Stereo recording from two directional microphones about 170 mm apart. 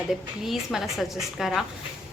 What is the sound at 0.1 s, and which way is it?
A woman's voice, centre (ahead or behind).